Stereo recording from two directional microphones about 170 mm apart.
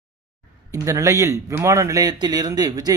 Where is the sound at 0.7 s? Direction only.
20° right (ahead or behind).